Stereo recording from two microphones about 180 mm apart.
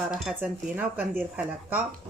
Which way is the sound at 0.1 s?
Centre (ahead or behind).